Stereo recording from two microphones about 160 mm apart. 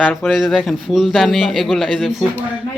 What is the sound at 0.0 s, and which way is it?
A man's voice, centre (ahead or behind).